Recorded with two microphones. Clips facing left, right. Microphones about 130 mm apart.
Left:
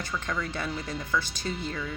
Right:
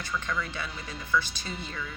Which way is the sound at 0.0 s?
40° left (ahead or behind).